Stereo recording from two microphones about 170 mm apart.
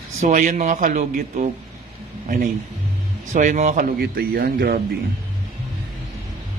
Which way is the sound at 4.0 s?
65° right (ahead or behind).